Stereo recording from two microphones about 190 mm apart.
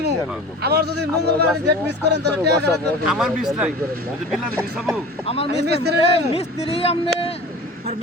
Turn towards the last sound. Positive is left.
turn(degrees=30)  # may be behind; listen again after turning